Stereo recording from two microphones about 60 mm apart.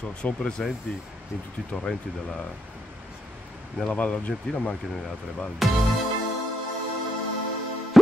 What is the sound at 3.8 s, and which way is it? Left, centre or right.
Speech, centre.